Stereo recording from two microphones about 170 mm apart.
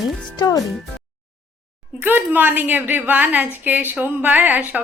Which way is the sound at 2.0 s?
10° right (ahead or behind).